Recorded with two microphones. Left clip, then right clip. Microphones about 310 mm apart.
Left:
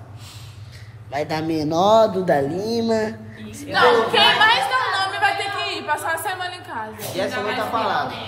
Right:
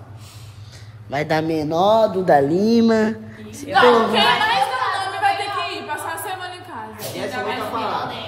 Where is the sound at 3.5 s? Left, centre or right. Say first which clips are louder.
Right 4 dB; right.